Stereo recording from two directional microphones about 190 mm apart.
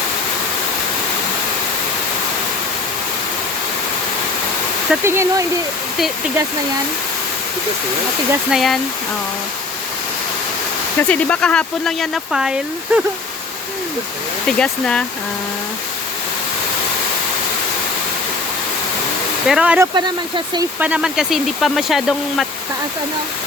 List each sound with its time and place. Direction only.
4.9 s speech: 15° right (ahead or behind)
8.3 s speech: 5° right (ahead or behind)
11.1 s speech: 5° left (ahead or behind)
14.4 s speech: 5° left (ahead or behind)
19.5 s speech: 5° right (ahead or behind)
20.0 s speech: 25° right (ahead or behind)
20.7 s speech: 5° right (ahead or behind)